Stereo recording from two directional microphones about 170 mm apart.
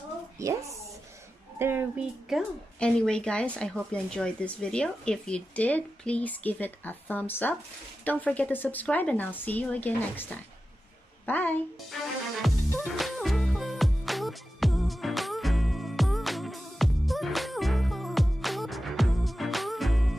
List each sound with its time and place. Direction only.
0.4 s speech: 15° right (ahead or behind)
1.6 s speech: 15° right (ahead or behind)
2.2 s speech: centre (ahead or behind)
11.9 s music: centre (ahead or behind)